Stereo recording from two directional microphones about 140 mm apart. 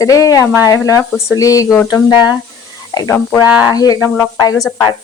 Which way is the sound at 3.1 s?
10° left (ahead or behind).